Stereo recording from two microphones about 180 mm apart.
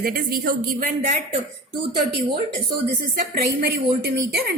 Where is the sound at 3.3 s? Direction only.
60° right (ahead or behind).